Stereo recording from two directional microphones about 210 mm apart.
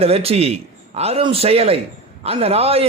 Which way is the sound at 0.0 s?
30° right (ahead or behind).